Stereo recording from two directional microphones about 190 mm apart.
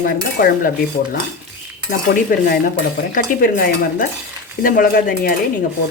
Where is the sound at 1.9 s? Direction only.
50° left (ahead or behind).